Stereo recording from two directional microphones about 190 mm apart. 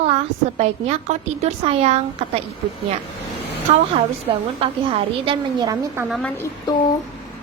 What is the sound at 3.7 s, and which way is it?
A woman's voice, 35° right (ahead or behind).